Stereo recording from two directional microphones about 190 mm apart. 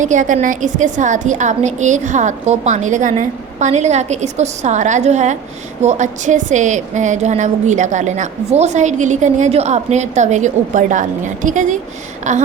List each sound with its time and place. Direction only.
0.0 s a woman's voice: 40° right (ahead or behind)